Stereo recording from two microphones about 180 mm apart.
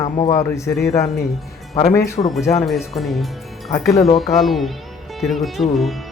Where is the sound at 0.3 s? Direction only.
15° left (ahead or behind).